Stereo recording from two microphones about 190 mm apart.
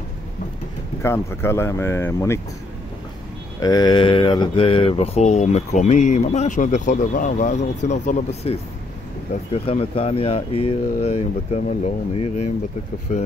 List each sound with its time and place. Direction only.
1.0 s speech: 15° left (ahead or behind)
3.5 s speech: 20° left (ahead or behind); by 13.2 s 40° left (ahead or behind)